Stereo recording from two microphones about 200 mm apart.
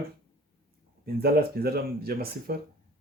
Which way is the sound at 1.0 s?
50° right (ahead or behind).